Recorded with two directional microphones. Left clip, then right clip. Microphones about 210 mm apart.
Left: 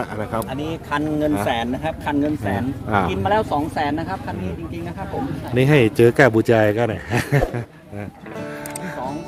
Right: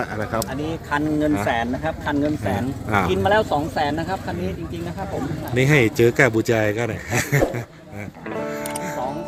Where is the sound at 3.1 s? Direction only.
5° right (ahead or behind).